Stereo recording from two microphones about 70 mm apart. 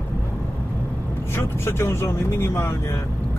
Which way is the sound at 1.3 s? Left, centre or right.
Left.